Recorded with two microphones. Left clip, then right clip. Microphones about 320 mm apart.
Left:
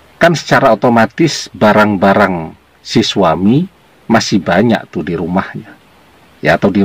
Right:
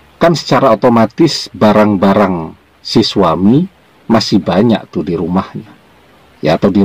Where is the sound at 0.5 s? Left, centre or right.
Centre.